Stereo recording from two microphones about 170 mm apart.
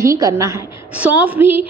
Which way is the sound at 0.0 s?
20° right (ahead or behind).